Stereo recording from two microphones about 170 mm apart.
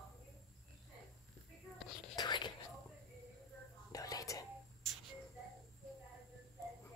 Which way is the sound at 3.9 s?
20° left (ahead or behind).